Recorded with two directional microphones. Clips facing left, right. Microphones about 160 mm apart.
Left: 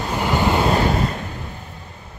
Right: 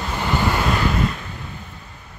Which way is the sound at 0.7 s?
35° left (ahead or behind).